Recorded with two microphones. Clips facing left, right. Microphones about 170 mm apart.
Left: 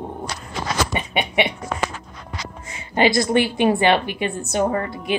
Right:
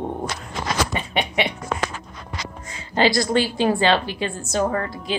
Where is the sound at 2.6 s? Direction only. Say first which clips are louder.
Left 1 dB; 20° left (ahead or behind).